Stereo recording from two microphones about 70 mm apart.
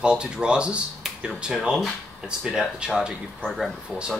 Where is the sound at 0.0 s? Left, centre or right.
Centre.